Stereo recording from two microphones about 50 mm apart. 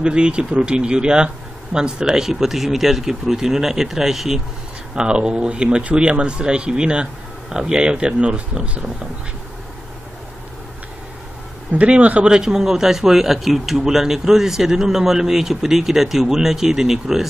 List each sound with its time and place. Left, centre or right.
0.0 s a man's voice: centre
4.9 s speech: centre
11.7 s speech: right
12.3 s a man's voice: centre